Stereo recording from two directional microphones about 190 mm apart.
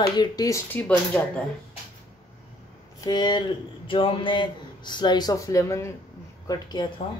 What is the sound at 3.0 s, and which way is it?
Speech, 20° left (ahead or behind).